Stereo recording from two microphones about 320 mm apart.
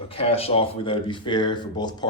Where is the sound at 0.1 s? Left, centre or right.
Centre.